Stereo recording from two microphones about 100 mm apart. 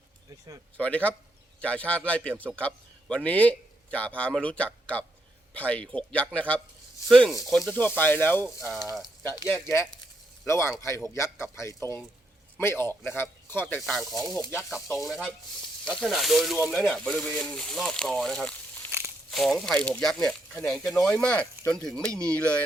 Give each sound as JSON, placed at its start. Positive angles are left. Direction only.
{"t": 0.8, "sound": "speech", "side_deg": 15}
{"t": 2.6, "sound": "a sound", "side_deg": 15}
{"t": 3.2, "sound": "speech", "side_deg": 15}
{"t": 7.1, "sound": "speech", "side_deg": 5}
{"t": 7.7, "sound": "a man's voice", "side_deg": 20}
{"t": 8.6, "sound": "speech", "side_deg": 0}
{"t": 10.4, "sound": "a man's voice", "side_deg": 25}
{"t": 13.8, "sound": "speech", "side_deg": 0}
{"t": 15.8, "sound": "speech", "side_deg": 10}
{"t": 18.9, "sound": "a sound", "side_deg": -25}
{"t": 19.3, "sound": "speech", "side_deg": 0}